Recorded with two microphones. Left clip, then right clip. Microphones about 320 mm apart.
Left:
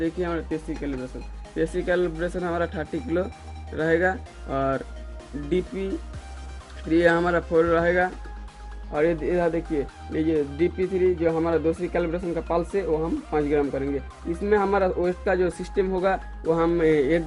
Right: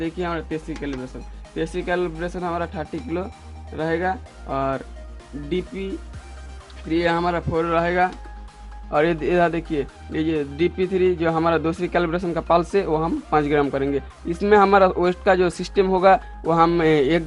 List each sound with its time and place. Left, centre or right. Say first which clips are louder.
0.0 s speech: right 1 dB; centre